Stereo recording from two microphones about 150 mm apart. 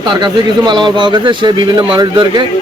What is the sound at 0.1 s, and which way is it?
A man's voice, 30° right (ahead or behind).